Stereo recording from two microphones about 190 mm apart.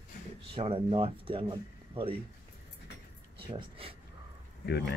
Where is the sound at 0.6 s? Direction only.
30° right (ahead or behind).